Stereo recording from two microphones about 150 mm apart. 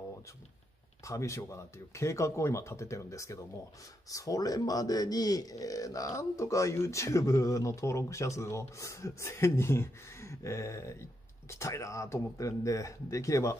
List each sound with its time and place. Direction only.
1.0 s speech: 20° left (ahead or behind)